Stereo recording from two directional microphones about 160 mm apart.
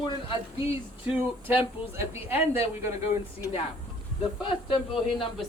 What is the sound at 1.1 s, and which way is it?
Speech, 10° right (ahead or behind).